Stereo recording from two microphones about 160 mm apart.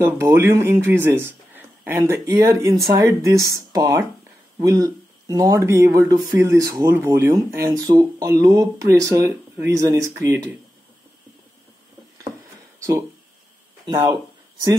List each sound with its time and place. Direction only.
0.0 s speech: 15° right (ahead or behind)
12.7 s a sound: 20° right (ahead or behind)
13.8 s speech: 25° right (ahead or behind)